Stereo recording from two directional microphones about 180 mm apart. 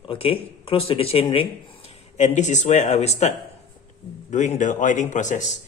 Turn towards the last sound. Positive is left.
turn(degrees=45)  # may be behind; listen again after turning